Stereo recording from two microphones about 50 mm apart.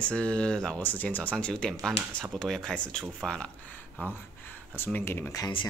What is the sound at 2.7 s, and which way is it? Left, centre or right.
Speech, left.